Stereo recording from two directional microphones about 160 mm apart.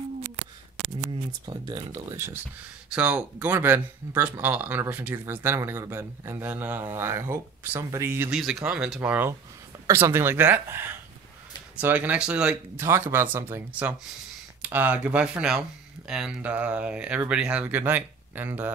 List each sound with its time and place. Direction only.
1.4 s speech: 25° right (ahead or behind)
2.9 s speech: 10° right (ahead or behind)
8.4 s speech: centre (ahead or behind)